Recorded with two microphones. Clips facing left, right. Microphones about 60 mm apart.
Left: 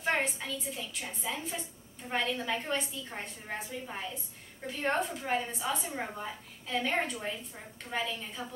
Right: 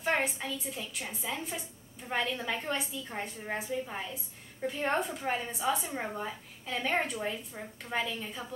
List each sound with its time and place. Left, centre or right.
0.1 s a woman's voice: centre